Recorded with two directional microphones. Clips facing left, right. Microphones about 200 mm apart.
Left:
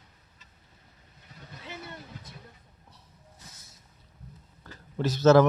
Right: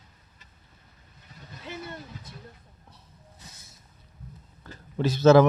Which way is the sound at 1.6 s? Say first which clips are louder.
Right 4 dB; 50° right (ahead or behind).